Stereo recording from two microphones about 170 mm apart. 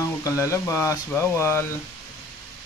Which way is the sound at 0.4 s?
15° left (ahead or behind).